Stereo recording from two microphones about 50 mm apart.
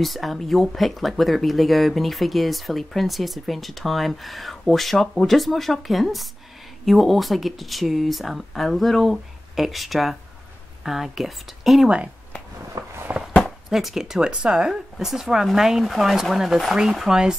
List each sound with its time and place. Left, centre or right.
0.0 s speech: centre
13.1 s a sound: right
13.7 s speech: centre